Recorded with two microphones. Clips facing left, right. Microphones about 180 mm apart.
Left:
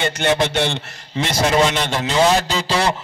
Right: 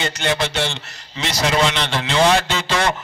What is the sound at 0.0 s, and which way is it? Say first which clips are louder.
A man's voice: left 3 dB; 55° left (ahead or behind).